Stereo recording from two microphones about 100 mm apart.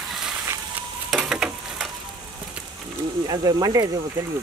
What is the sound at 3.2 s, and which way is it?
Speech, 40° right (ahead or behind).